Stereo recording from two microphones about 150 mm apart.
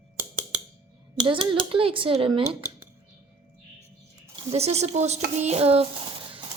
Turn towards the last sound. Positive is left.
turn(degrees=-40)  # may be behind; listen again after turning